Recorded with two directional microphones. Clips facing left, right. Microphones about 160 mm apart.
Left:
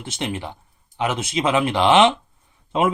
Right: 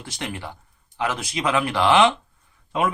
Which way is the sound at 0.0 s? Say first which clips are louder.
Left 4 dB; 20° left (ahead or behind).